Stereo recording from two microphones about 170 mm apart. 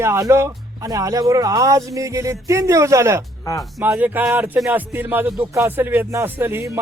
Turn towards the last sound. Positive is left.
turn(degrees=-15)  # may be behind; listen again after turning